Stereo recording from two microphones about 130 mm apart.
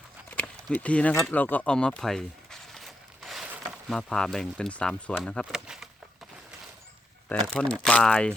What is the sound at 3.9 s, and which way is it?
Speech, 5° left (ahead or behind).